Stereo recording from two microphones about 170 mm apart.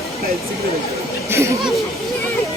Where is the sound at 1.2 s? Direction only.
15° right (ahead or behind).